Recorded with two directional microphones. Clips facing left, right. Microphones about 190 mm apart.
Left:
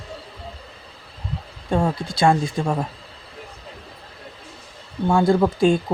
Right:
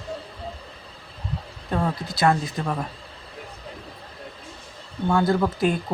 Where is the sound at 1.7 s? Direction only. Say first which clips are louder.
Left 4 dB; 25° left (ahead or behind).